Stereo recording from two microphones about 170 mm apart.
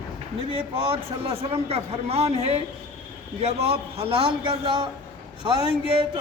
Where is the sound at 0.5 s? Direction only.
35° right (ahead or behind).